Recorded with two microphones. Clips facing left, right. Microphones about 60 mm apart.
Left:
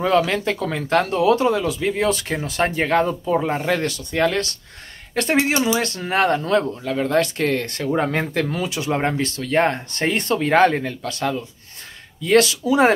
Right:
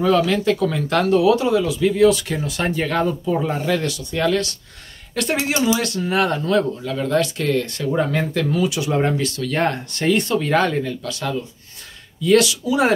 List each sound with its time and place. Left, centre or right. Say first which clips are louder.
0.0 s speech: right 1 dB; left
3.1 s speech: even; left
3.4 s speech: even; left